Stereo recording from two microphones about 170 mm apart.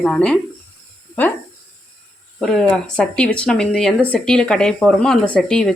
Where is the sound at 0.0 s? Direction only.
5° left (ahead or behind).